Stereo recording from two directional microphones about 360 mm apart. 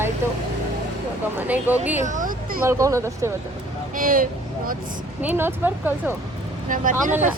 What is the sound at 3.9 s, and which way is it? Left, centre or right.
Speech, right.